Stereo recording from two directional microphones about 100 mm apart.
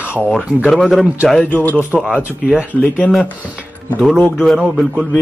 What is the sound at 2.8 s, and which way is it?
Speech, 15° left (ahead or behind).